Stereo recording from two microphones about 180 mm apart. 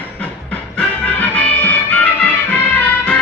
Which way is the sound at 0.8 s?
5° left (ahead or behind).